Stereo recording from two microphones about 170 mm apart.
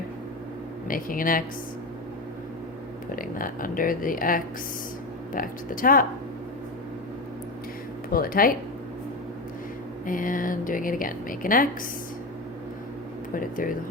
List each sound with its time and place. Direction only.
0.9 s speech: 55° left (ahead or behind)
3.2 s speech: 55° left (ahead or behind)
8.1 s speech: 60° left (ahead or behind)
10.1 s a woman's voice: 55° left (ahead or behind)
13.3 s speech: 55° left (ahead or behind)